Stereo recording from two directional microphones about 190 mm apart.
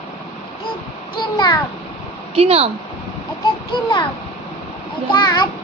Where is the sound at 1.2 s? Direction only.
20° left (ahead or behind).